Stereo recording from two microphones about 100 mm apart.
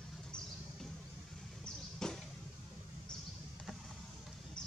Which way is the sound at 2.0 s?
5° left (ahead or behind).